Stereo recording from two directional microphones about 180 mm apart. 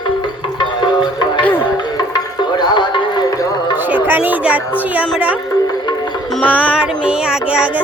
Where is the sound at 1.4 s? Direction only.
10° left (ahead or behind).